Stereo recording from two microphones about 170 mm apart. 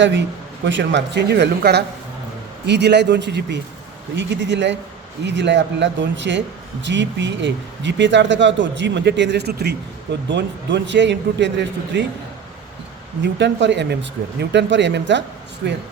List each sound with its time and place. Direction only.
0.0 s speech: 90° right
13.2 s speech: 90° right